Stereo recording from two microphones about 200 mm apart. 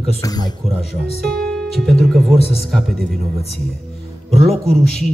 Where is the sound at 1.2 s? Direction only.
Centre (ahead or behind).